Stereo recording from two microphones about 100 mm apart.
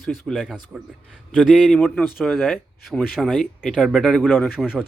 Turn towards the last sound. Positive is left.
turn(degrees=-5)  # may be behind; listen again after turning